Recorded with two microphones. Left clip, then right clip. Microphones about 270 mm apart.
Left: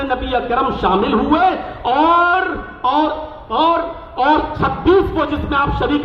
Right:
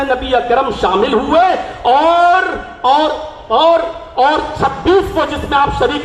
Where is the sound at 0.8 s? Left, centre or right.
Centre.